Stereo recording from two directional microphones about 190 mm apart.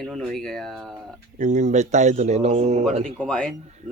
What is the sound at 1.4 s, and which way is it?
A man's voice, 40° right (ahead or behind).